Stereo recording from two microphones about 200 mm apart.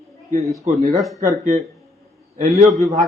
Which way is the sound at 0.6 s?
35° right (ahead or behind).